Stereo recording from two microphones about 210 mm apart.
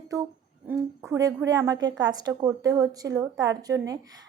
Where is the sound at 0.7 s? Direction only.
15° right (ahead or behind).